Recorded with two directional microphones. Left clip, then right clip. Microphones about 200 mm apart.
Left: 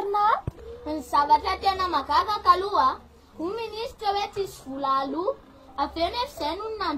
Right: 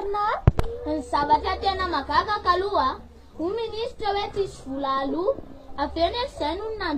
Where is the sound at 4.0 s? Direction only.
15° left (ahead or behind).